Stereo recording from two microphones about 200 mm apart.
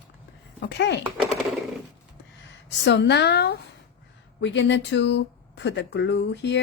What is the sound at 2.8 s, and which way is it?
Speech, 60° left (ahead or behind).